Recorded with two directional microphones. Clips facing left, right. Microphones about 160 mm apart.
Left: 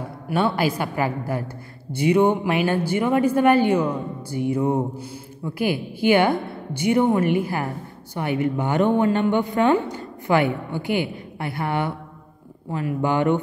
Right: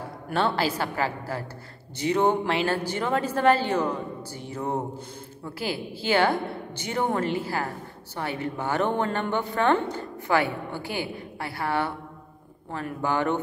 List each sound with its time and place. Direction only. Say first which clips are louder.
0.3 s a woman's voice: left 4 dB; 10° left (ahead or behind)